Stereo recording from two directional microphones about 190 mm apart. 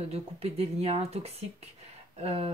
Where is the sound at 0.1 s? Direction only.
35° right (ahead or behind).